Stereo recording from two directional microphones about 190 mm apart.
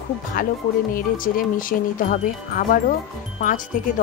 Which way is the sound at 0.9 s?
45° left (ahead or behind).